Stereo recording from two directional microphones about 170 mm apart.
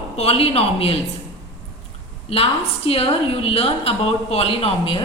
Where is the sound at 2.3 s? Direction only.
35° left (ahead or behind).